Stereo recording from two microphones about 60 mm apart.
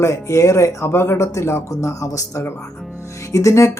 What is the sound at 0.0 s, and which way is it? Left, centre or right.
Speech, left.